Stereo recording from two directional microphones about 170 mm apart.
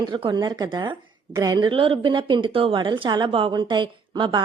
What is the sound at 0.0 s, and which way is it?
A woman's voice, 30° right (ahead or behind).